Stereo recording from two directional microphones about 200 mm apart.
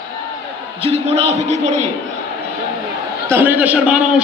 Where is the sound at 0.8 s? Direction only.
30° right (ahead or behind).